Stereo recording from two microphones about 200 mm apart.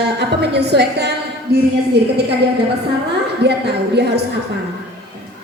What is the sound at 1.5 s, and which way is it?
Speech, 50° right (ahead or behind).